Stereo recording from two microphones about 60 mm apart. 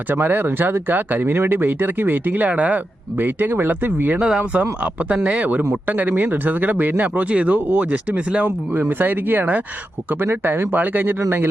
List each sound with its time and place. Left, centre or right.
0.1 s speech: right
4.2 s speech: centre
8.4 s speech: right